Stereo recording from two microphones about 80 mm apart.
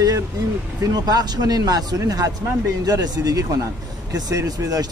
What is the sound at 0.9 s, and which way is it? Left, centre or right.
A man's voice, right.